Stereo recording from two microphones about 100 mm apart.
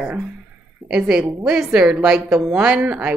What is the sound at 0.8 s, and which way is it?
Speech, 5° right (ahead or behind).